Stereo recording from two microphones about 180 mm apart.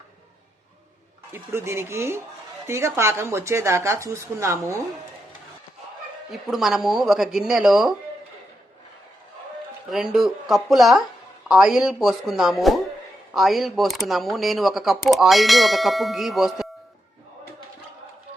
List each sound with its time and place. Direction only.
1.3 s a woman's voice: 15° right (ahead or behind)
6.3 s speech: centre (ahead or behind)
9.9 s speech: 5° right (ahead or behind)